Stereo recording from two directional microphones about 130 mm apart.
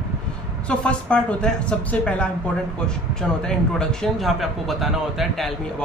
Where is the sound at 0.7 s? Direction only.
10° left (ahead or behind).